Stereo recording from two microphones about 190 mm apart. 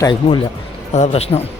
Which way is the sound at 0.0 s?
25° left (ahead or behind).